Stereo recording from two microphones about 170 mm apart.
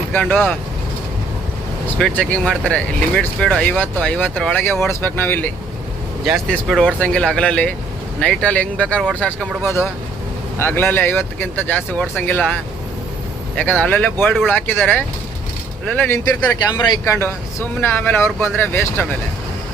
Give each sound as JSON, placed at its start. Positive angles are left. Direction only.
{"t": 0.1, "sound": "speech", "side_deg": 10}
{"t": 2.0, "sound": "speech", "side_deg": 5}
{"t": 6.2, "sound": "speech", "side_deg": 0}
{"t": 9.6, "sound": "speech", "side_deg": 15}
{"t": 13.6, "sound": "speech", "side_deg": 10}